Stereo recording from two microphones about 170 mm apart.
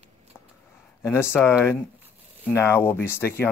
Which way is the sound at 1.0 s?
15° left (ahead or behind).